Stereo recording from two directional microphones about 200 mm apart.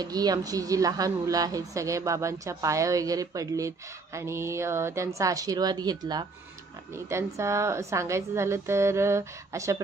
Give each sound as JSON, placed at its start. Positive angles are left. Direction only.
{"t": 0.0, "sound": "a woman's voice", "side_deg": -20}